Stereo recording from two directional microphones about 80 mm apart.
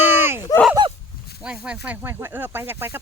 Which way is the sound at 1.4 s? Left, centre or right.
Centre.